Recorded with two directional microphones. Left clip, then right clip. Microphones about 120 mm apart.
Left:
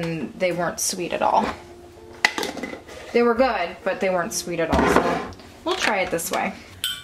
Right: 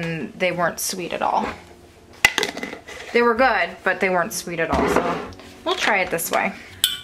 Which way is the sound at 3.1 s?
35° right (ahead or behind).